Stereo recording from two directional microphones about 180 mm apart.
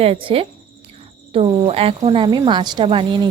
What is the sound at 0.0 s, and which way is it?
Speech, 30° right (ahead or behind).